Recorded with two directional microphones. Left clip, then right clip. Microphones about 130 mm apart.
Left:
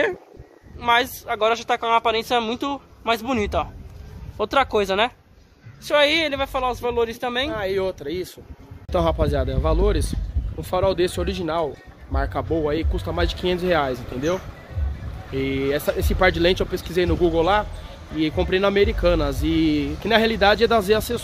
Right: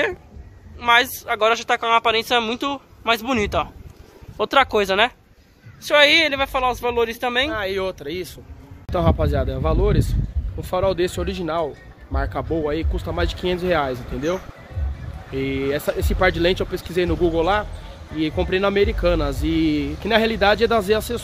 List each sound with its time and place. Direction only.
0.7 s speech: 15° left (ahead or behind); by 7.5 s 5° right (ahead or behind)
7.5 s speech: 30° left (ahead or behind)
8.9 s speech: centre (ahead or behind)